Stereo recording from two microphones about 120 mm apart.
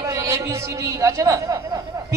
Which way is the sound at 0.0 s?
30° right (ahead or behind).